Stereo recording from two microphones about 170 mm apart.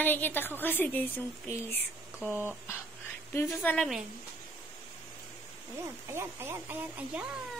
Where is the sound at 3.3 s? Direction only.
15° left (ahead or behind).